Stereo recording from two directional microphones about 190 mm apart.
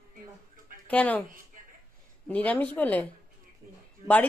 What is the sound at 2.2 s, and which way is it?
A woman's voice, 10° left (ahead or behind).